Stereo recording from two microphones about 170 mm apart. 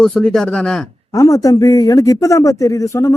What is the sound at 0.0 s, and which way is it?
Speech, 5° left (ahead or behind).